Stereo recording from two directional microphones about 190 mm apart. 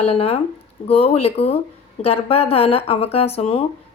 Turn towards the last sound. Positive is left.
turn(degrees=30)  # may be behind; listen again after turning